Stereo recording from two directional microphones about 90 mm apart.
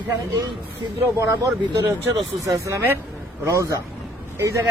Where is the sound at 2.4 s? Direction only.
35° right (ahead or behind).